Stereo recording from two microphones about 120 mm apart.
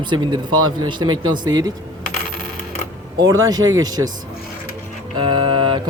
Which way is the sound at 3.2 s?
35° right (ahead or behind).